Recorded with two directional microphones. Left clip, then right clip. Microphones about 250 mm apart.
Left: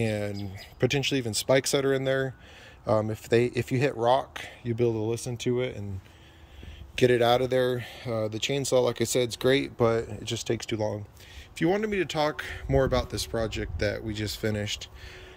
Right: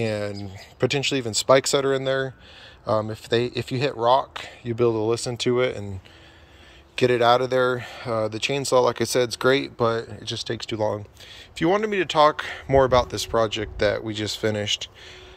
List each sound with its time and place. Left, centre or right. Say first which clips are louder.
0.0 s speech: right 4 dB; centre
5.4 s speech: right 6 dB; right
7.0 s speech: right 4 dB; centre
11.5 s speech: right 5 dB; centre